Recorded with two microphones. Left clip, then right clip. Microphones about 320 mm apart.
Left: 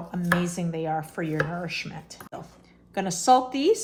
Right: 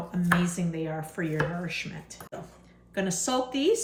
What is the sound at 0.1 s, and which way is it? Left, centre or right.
Speech, centre.